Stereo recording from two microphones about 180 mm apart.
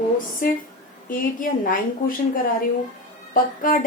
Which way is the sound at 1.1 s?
50° left (ahead or behind).